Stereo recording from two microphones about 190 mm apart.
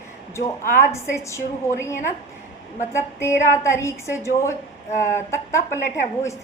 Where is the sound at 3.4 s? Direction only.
15° left (ahead or behind).